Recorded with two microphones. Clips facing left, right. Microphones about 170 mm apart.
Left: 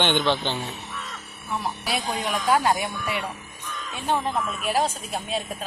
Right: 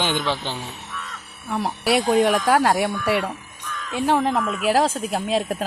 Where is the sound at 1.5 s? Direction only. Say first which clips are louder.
Right 7 dB; 70° right (ahead or behind).